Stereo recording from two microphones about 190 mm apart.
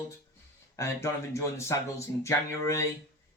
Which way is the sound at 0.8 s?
15° left (ahead or behind).